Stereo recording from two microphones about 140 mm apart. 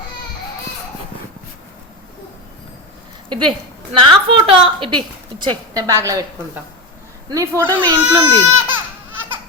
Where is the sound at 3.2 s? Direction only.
35° right (ahead or behind).